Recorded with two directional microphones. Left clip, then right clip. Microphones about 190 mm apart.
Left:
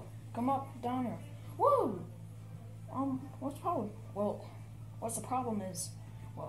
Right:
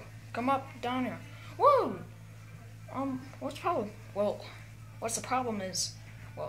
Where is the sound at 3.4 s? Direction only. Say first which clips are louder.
Right 4 dB; 60° right (ahead or behind).